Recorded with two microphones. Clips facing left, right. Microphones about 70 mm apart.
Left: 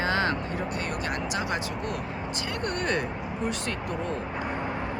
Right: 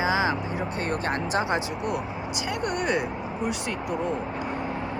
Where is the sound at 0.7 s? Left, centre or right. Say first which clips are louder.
Right 3 dB; right; by 4.1 s centre.